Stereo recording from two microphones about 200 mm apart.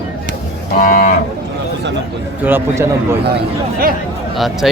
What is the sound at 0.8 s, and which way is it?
Cattle, 40° left (ahead or behind).